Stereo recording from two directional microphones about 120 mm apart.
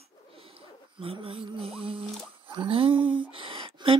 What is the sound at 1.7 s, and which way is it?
Speech, 50° right (ahead or behind).